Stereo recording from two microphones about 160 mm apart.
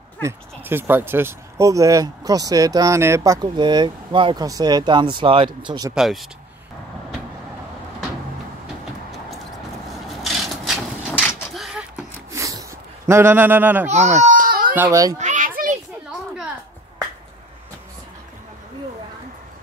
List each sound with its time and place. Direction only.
0.2 s speech: 15° right (ahead or behind)
5.9 s speech: centre (ahead or behind)
10.2 s wood: centre (ahead or behind)
11.5 s a sound: centre (ahead or behind)
12.3 s a sound: 20° right (ahead or behind)
13.8 s speech: 45° right (ahead or behind)
14.2 s baby cry: 55° right (ahead or behind)
14.8 s speech: 20° right (ahead or behind)
15.1 s children playing: 50° right (ahead or behind)